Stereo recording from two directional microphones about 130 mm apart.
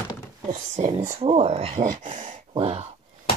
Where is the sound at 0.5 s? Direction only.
70° right (ahead or behind).